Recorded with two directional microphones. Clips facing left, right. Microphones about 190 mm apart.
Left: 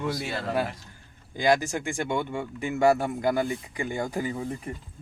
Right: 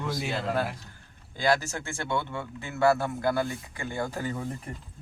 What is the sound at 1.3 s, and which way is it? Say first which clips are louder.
Speech: left 3 dB; 15° left (ahead or behind).